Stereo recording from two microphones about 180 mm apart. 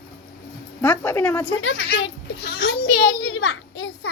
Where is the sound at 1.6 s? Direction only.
90° left.